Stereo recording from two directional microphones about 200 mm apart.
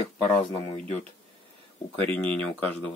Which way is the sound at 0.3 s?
5° left (ahead or behind).